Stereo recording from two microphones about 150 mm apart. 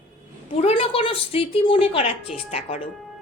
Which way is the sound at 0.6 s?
40° left (ahead or behind).